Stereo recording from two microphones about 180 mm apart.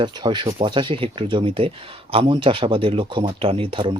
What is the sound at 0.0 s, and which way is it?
Speech, 25° right (ahead or behind).